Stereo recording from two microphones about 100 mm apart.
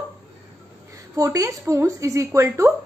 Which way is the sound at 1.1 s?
35° right (ahead or behind).